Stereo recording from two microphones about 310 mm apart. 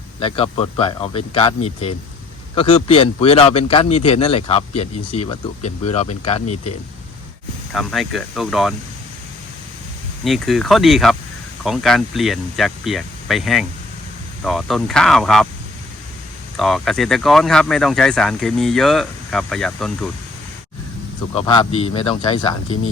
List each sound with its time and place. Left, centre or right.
0.2 s a man's voice: centre
7.7 s speech: centre
10.2 s speech: centre
16.6 s speech: centre
21.3 s a man's voice: centre